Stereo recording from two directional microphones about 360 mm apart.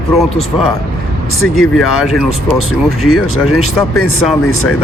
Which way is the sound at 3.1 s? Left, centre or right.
Left.